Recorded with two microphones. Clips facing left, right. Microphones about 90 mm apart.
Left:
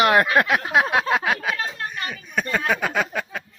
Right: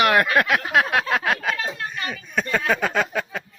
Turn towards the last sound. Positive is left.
turn(degrees=5)  # may be behind; listen again after turning